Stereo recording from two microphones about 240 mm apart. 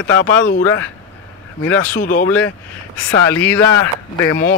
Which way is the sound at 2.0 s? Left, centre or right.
Left.